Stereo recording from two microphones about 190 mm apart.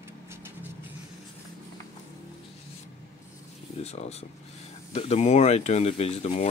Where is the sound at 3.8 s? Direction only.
35° left (ahead or behind).